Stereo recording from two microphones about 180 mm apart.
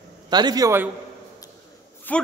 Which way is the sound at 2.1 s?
10° left (ahead or behind).